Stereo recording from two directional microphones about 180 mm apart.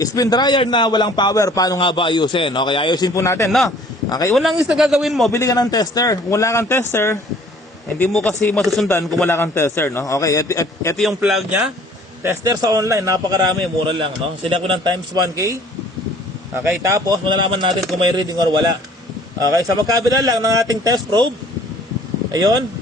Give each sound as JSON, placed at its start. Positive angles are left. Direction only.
{"t": 0.0, "sound": "a man's voice", "side_deg": 20}
{"t": 4.3, "sound": "a man's voice", "side_deg": 0}
{"t": 5.3, "sound": "a man's voice", "side_deg": 20}
{"t": 9.3, "sound": "a man's voice", "side_deg": 15}
{"t": 10.9, "sound": "a man's voice", "side_deg": 0}
{"t": 12.2, "sound": "speech", "side_deg": -15}
{"t": 16.6, "sound": "speech", "side_deg": -20}
{"t": 22.3, "sound": "speech", "side_deg": -20}